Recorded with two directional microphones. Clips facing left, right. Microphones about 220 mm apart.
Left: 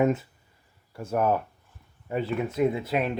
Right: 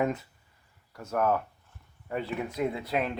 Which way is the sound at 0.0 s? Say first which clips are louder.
Left 5 dB; 25° left (ahead or behind).